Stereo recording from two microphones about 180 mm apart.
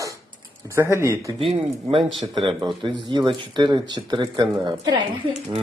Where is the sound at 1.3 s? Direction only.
30° right (ahead or behind).